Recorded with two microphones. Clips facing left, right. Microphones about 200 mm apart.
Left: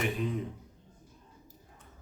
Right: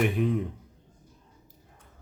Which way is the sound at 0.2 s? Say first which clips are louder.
Right 7 dB; 60° right (ahead or behind).